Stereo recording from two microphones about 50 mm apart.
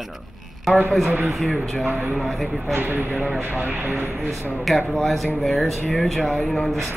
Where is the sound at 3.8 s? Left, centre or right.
Right.